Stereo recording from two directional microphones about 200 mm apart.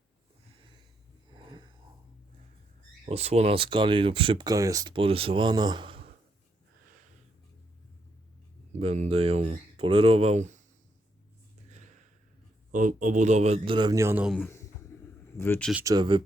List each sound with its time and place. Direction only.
3.1 s speech: 30° right (ahead or behind)
8.7 s speech: 30° right (ahead or behind)
12.7 s speech: 40° right (ahead or behind); by 14.3 s 15° right (ahead or behind)
14.3 s a sound: 10° left (ahead or behind)
15.4 s speech: 10° left (ahead or behind)
15.7 s speech: 15° right (ahead or behind)